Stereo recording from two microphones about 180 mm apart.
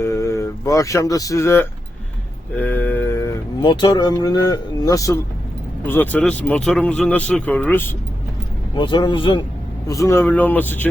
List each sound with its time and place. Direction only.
0.0 s a sound: 15° left (ahead or behind)
3.6 s speech: 25° left (ahead or behind)
8.7 s speech: 25° left (ahead or behind)
9.8 s speech: 20° left (ahead or behind)